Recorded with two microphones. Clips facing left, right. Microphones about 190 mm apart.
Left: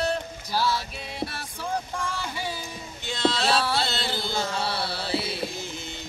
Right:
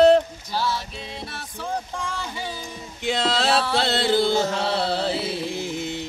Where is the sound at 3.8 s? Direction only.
60° right (ahead or behind).